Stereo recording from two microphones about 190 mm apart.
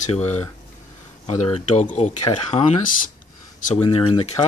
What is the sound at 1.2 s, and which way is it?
Speech, 35° left (ahead or behind).